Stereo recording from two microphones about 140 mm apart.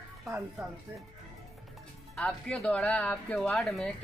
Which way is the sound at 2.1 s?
10° left (ahead or behind).